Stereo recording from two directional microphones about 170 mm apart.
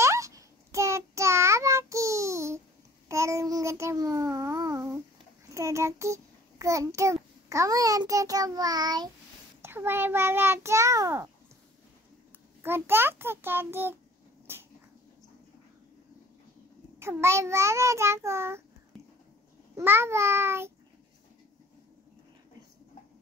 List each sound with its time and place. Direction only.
0.0 s child singing: 15° right (ahead or behind)
3.1 s babbling: 15° right (ahead or behind)
5.5 s a child's voice: 15° right (ahead or behind)
9.6 s a child's voice: 15° right (ahead or behind)
12.6 s a child's voice: 15° right (ahead or behind)
14.5 s a sound: 15° right (ahead or behind)
17.0 s a child's voice: 15° right (ahead or behind)
19.7 s a child's voice: 15° right (ahead or behind)